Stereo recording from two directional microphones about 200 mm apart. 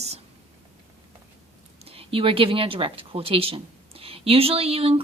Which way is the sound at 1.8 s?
30° right (ahead or behind).